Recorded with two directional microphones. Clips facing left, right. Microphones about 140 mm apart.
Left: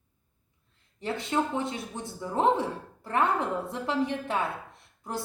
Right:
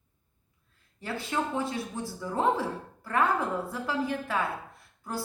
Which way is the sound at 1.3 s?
20° left (ahead or behind).